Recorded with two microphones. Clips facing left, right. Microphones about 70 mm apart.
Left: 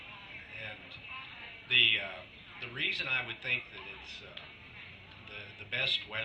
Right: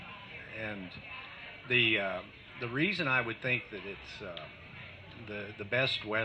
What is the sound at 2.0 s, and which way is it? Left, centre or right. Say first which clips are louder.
Speech: right 8 dB; right.